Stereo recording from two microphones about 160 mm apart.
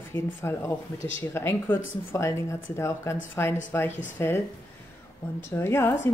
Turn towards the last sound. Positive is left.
turn(degrees=15)  # may be behind; listen again after turning